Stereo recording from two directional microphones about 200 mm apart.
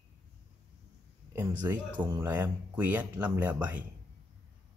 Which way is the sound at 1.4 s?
10° right (ahead or behind).